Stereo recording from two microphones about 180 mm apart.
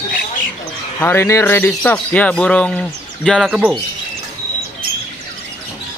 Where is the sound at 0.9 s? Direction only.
15° left (ahead or behind); by 3.7 s 5° right (ahead or behind).